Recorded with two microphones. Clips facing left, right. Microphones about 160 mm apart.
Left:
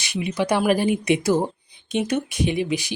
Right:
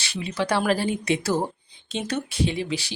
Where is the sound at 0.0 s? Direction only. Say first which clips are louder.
Left 3 dB; 15° left (ahead or behind).